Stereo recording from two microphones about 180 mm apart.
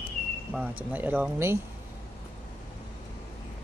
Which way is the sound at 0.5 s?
10° right (ahead or behind).